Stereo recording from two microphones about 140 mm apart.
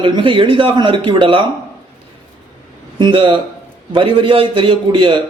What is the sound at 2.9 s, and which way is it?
Speech, 35° right (ahead or behind).